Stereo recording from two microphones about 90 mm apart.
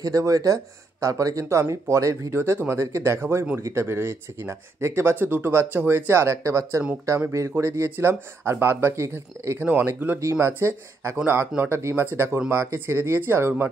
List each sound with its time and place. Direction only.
0.0 s speech: 40° right (ahead or behind)
9.7 s speech: 20° right (ahead or behind)